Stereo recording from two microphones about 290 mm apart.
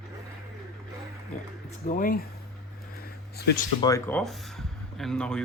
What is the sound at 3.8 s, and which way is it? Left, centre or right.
Speech, centre.